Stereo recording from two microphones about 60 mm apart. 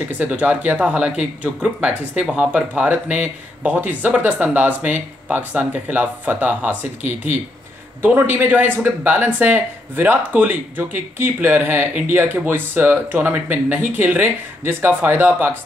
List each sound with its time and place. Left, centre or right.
0.2 s speech: right